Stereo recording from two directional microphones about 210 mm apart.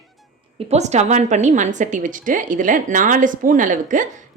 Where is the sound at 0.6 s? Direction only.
30° right (ahead or behind).